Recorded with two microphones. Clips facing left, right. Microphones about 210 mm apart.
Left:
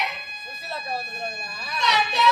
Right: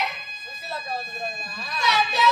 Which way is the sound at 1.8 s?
Centre (ahead or behind).